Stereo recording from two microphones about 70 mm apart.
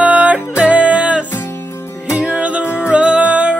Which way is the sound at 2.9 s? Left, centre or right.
Centre.